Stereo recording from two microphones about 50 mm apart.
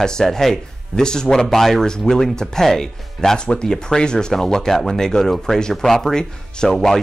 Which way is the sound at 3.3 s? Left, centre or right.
Centre.